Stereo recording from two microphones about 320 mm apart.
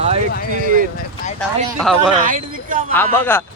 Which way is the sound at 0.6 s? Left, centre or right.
Right.